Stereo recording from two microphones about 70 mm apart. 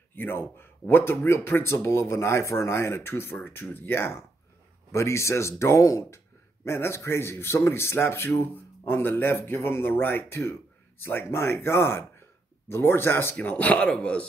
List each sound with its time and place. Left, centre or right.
0.1 s a man's voice: left
13.4 s speech: centre